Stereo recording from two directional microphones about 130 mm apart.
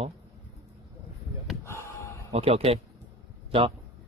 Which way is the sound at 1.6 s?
20° left (ahead or behind).